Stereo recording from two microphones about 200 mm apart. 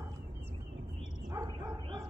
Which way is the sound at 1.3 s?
20° right (ahead or behind).